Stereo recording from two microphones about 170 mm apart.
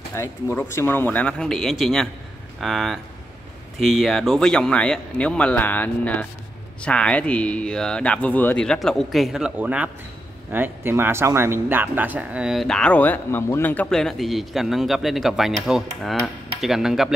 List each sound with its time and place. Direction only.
0.1 s speech: 15° left (ahead or behind); by 17.1 s centre (ahead or behind)